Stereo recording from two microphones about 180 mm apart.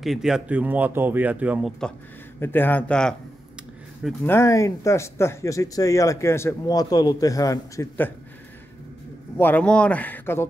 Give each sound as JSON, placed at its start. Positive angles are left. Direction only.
{"t": 0.0, "sound": "speech", "side_deg": 0}
{"t": 2.4, "sound": "speech", "side_deg": 10}
{"t": 9.4, "sound": "speech", "side_deg": 10}